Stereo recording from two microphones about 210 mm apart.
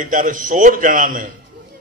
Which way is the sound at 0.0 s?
40° right (ahead or behind).